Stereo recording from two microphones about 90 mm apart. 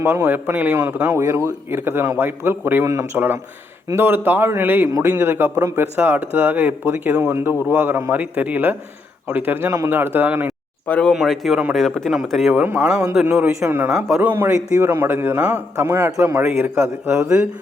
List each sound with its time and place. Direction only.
0.0 s a man's voice: 25° right (ahead or behind)
1.0 s a man's voice: 35° right (ahead or behind)
2.8 s a man's voice: 35° right (ahead or behind); by 10.5 s 20° right (ahead or behind)
10.8 s speech: 15° left (ahead or behind)
11.1 s a man's voice: centre (ahead or behind)
12.6 s a man's voice: 20° right (ahead or behind)
13.3 s speech: 10° right (ahead or behind)
13.7 s a man's voice: 20° right (ahead or behind)
17.2 s speech: 10° right (ahead or behind)